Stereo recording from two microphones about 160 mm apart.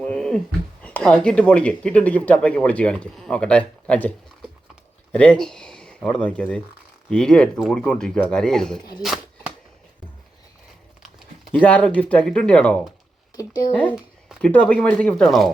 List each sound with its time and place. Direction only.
0.0 s speech: 5° left (ahead or behind)
5.1 s speech: 5° left (ahead or behind)
11.6 s speech: 10° left (ahead or behind)
13.3 s speech: 25° left (ahead or behind)
13.9 s a sound: 5° right (ahead or behind)
14.5 s speech: 10° left (ahead or behind)